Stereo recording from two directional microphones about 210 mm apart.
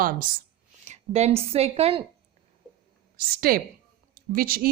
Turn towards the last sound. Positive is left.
turn(degrees=-45)  # may be behind; listen again after turning